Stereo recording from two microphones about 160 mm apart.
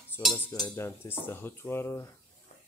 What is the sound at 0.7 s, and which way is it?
Speech, 15° left (ahead or behind).